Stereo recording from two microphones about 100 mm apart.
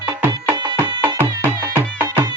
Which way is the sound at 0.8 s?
20° right (ahead or behind).